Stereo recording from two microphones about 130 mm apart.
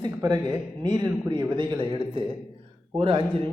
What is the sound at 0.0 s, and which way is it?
A man's voice, 30° right (ahead or behind).